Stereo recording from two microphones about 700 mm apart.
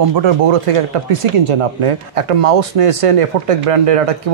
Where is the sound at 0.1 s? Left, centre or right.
Right.